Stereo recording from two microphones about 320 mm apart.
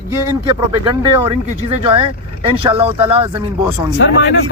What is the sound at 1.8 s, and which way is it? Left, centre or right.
A man's voice, centre.